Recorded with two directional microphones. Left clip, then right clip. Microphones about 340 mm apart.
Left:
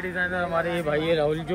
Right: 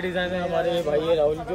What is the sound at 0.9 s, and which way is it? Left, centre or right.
Speech, left.